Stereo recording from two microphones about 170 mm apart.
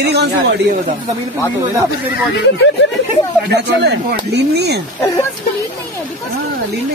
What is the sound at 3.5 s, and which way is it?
Speech, 85° right.